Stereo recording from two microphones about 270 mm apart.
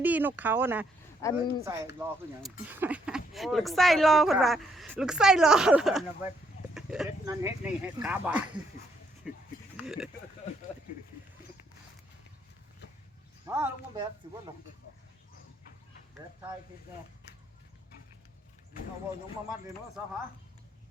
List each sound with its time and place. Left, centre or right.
0.0 s speech: centre
1.2 s speech: centre
2.0 s speech: centre
9.8 s speech: centre
13.5 s speech: centre